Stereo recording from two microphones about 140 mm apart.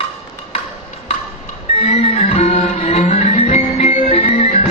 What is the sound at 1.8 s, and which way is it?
Music, 45° left (ahead or behind).